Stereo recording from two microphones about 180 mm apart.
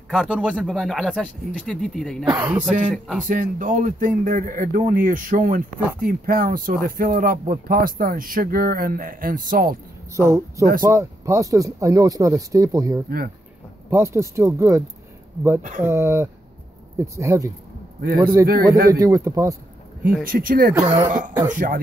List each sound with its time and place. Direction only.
0.1 s speech: 5° right (ahead or behind)
2.3 s speech: 10° right (ahead or behind)
3.3 s speech: 45° right (ahead or behind)
10.1 s speech: 15° right (ahead or behind)
15.8 s speech: 15° right (ahead or behind)
18.0 s a man's voice: 55° right (ahead or behind)
18.9 s speech: 20° right (ahead or behind)
20.2 s speech: 50° right (ahead or behind)
20.8 s speech: 30° right (ahead or behind)
21.5 s speech: 50° right (ahead or behind)